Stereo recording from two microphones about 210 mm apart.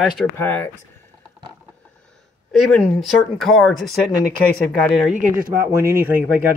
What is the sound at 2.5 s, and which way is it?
Speech, centre (ahead or behind).